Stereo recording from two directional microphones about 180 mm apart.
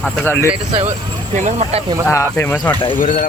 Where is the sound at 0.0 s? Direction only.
10° left (ahead or behind).